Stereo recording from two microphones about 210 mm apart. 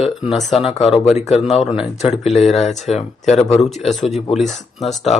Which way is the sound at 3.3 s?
30° left (ahead or behind).